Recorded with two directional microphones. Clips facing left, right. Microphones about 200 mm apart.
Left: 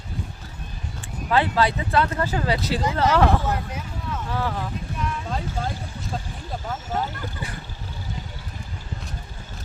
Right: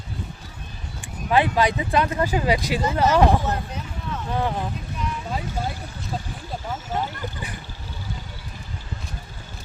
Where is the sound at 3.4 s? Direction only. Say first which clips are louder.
Even; 10° left (ahead or behind).